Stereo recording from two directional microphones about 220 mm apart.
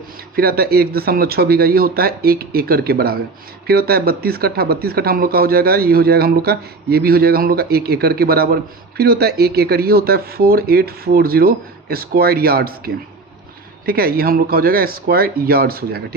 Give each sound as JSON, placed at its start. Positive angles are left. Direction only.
{"t": 0.3, "sound": "speech", "side_deg": -45}